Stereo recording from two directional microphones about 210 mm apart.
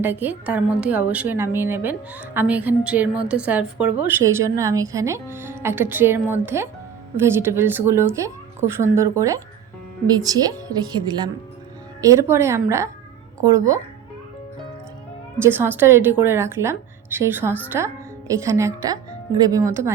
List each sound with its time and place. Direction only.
0.0 s a woman's voice: 10° right (ahead or behind)
15.4 s a woman's voice: 10° right (ahead or behind)